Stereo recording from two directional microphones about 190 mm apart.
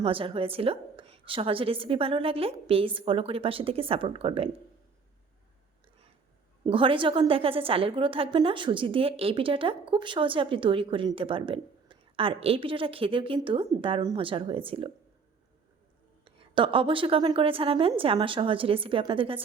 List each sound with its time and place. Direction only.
0.0 s a woman's voice: 30° right (ahead or behind)
6.7 s a woman's voice: 25° right (ahead or behind)
16.2 s a woman's voice: 30° right (ahead or behind)